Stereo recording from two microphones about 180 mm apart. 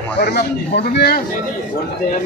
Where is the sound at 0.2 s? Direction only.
65° left (ahead or behind).